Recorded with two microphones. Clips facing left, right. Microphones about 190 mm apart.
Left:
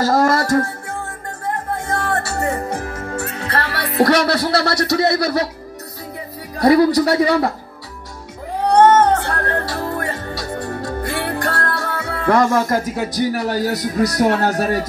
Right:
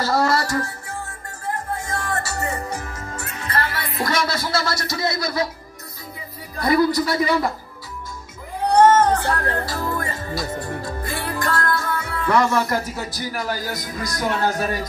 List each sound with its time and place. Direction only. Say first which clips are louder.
0.0 s music: left 4 dB; 45° left (ahead or behind); by 5.5 s 70° left (ahead or behind)
6.6 s speech: left 6 dB; 75° left (ahead or behind)
8.7 s music: left 2 dB; 60° left (ahead or behind)
13.3 s speech: left 7 dB; 70° left (ahead or behind)